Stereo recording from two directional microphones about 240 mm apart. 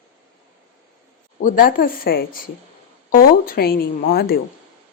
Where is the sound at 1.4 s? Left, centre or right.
Left.